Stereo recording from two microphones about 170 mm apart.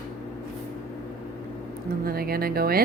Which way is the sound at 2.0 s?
60° right (ahead or behind).